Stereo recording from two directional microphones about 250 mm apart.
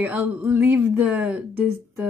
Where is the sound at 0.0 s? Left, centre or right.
Centre.